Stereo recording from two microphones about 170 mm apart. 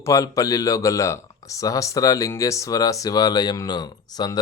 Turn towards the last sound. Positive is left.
turn(degrees=25)  # may be behind; listen again after turning